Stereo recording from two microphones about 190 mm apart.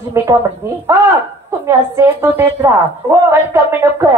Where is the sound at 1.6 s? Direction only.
15° right (ahead or behind).